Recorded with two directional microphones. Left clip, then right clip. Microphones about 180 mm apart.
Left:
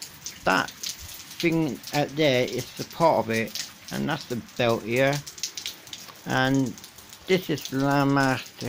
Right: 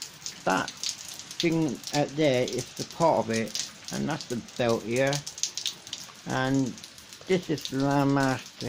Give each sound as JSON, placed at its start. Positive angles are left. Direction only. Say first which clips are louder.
{"t": 0.4, "sound": "speech", "louder": "left 4 dB", "side_deg": 10}
{"t": 6.2, "sound": "speech", "louder": "left 4 dB", "side_deg": 15}